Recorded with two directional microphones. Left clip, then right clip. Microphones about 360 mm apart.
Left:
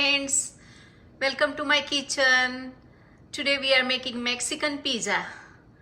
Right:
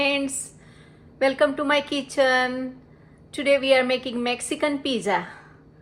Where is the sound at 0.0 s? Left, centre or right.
Centre.